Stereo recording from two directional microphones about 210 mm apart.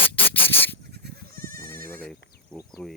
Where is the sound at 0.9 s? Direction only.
50° right (ahead or behind).